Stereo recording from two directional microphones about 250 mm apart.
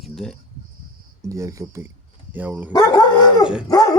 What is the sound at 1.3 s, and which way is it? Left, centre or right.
Speech, centre.